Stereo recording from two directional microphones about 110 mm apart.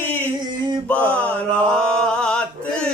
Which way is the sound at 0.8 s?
10° left (ahead or behind).